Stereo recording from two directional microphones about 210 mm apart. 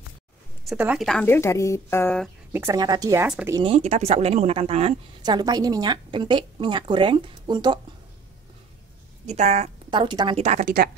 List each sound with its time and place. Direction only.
0.7 s a woman's voice: 5° right (ahead or behind)
2.5 s a woman's voice: 15° right (ahead or behind)
3.5 s speech: 25° right (ahead or behind)
9.2 s a woman's voice: 30° right (ahead or behind)